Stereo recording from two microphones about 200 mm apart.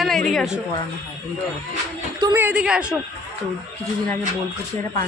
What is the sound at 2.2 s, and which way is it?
Speech, 15° right (ahead or behind).